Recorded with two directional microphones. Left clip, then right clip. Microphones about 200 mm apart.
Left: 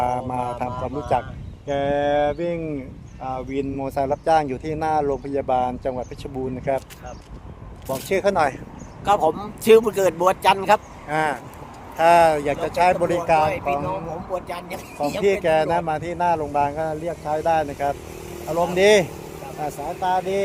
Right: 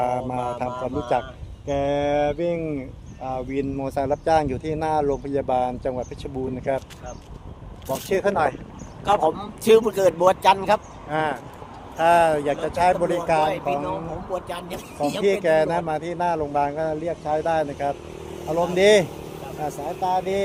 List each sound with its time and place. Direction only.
0.0 s speech: 15° left (ahead or behind)
8.1 s speech: 40° left (ahead or behind)
9.0 s speech: 15° left (ahead or behind)
11.1 s speech: 55° left (ahead or behind)
11.9 s speech: 35° left (ahead or behind)
13.4 s speech: centre (ahead or behind)
15.2 s speech: 20° left (ahead or behind)
18.3 s speech: 45° left (ahead or behind)
18.7 s speech: 25° left (ahead or behind)